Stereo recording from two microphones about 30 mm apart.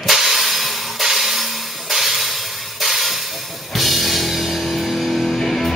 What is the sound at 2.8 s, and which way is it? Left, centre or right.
Music, centre.